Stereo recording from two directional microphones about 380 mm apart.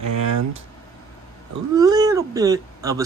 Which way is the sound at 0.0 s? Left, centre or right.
Right.